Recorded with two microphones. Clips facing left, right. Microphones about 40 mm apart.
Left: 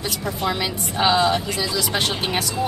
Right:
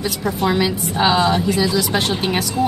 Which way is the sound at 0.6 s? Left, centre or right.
Centre.